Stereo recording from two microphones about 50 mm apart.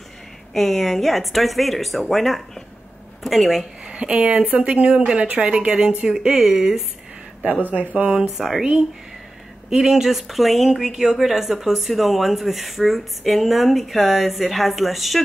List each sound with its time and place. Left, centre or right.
0.5 s speech: centre
3.8 s speech: right
6.3 s speech: centre
7.6 s speech: right
8.2 s speech: centre